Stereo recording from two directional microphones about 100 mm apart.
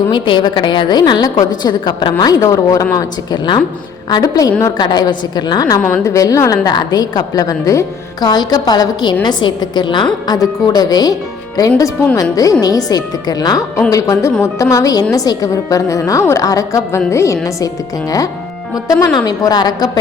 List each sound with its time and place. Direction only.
0.1 s a woman's voice: 50° left (ahead or behind)
5.8 s a woman's voice: 20° left (ahead or behind)
6.1 s a woman's voice: 35° left (ahead or behind)
8.2 s a woman's voice: 45° left (ahead or behind)
12.1 s a woman's voice: 35° left (ahead or behind)
18.7 s a woman's voice: 35° left (ahead or behind)